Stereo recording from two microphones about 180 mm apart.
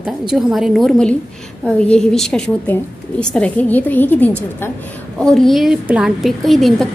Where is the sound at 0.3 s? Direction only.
Centre (ahead or behind).